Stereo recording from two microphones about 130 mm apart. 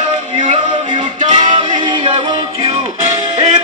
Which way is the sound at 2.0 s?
55° right (ahead or behind).